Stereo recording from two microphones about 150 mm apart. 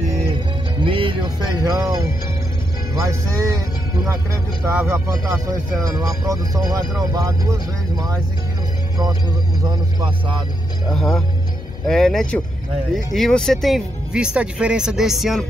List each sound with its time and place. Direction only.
0.7 s music: 35° right (ahead or behind)
2.9 s speech: 20° right (ahead or behind)
4.6 s speech: 15° right (ahead or behind)
9.6 s speech: 30° right (ahead or behind)
10.9 s speech: 5° left (ahead or behind)